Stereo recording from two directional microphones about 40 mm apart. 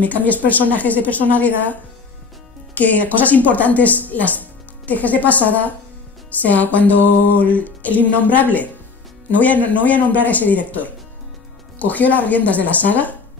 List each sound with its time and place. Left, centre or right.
0.0 s music: left
2.7 s speech: left
6.4 s music: left
11.8 s speech: left